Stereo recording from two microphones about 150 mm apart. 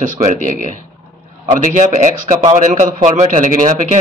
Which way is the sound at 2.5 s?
55° right (ahead or behind).